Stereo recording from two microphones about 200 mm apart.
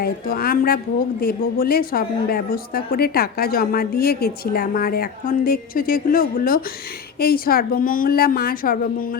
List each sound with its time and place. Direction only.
0.0 s a woman's voice: 50° left (ahead or behind)